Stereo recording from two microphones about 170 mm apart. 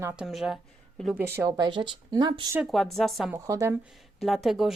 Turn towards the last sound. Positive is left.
turn(degrees=0)  # may be behind; listen again after turning